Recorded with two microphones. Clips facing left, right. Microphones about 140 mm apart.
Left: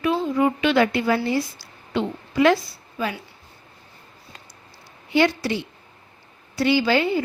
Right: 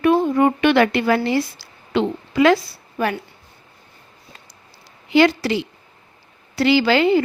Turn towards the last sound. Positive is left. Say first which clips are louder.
# right 5 dB
turn(degrees=-85)